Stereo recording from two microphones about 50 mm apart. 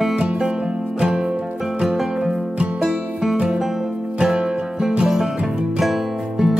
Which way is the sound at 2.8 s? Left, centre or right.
Centre.